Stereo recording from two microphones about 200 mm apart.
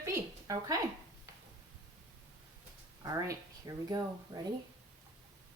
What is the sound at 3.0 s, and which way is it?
Speech, 15° right (ahead or behind).